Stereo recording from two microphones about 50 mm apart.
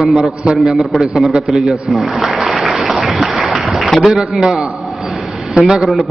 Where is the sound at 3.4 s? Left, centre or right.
Centre.